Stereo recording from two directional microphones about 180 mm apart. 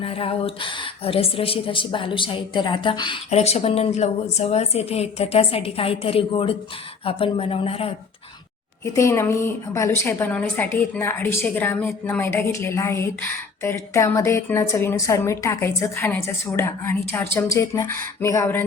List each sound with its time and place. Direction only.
0.0 s a woman's voice: 30° left (ahead or behind)
3.2 s a woman's voice: 35° left (ahead or behind)
8.8 s a woman's voice: 15° left (ahead or behind)